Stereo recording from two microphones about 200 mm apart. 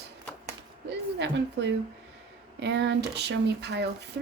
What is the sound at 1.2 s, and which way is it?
Speech, 60° right (ahead or behind).